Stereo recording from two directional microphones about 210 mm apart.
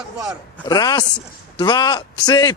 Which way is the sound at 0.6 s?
20° left (ahead or behind).